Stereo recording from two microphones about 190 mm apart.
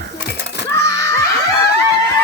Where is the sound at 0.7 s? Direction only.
15° left (ahead or behind).